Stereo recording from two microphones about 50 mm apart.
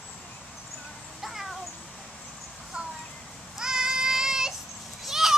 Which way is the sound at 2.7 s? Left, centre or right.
Centre.